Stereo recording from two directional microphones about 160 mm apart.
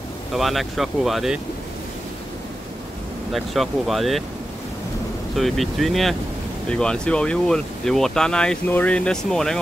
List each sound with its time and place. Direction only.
0.3 s speech: centre (ahead or behind)
3.3 s speech: centre (ahead or behind)
5.3 s speech: centre (ahead or behind)